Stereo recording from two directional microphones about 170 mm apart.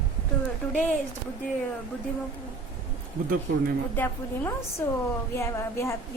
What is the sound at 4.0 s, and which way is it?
A woman's voice, 15° left (ahead or behind).